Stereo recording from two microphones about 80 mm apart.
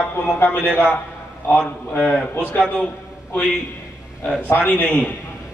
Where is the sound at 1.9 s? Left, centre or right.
Left.